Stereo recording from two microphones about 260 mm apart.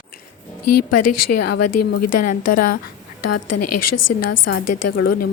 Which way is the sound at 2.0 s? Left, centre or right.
Left.